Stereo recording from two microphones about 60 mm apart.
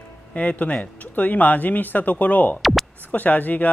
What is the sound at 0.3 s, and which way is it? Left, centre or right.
Speech, left.